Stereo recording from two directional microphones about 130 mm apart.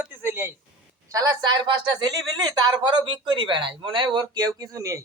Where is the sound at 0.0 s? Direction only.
15° right (ahead or behind).